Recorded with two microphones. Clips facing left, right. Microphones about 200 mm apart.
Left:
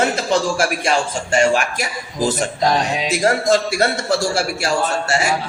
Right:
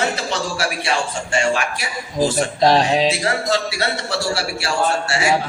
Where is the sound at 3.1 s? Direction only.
45° left (ahead or behind).